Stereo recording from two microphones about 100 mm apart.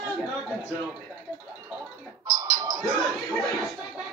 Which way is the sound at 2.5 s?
40° right (ahead or behind).